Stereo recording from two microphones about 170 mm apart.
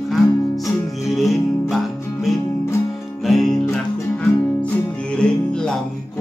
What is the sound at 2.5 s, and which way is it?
Music, 15° left (ahead or behind).